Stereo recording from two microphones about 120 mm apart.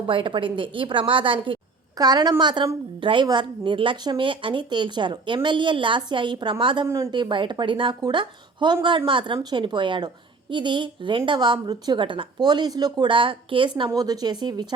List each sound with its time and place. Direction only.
0.1 s a woman's voice: 45° right (ahead or behind)
2.0 s a woman's voice: 35° right (ahead or behind)
6.8 s a woman's voice: 25° right (ahead or behind)
7.1 s a woman's voice: 40° right (ahead or behind)
13.9 s a woman's voice: 30° right (ahead or behind)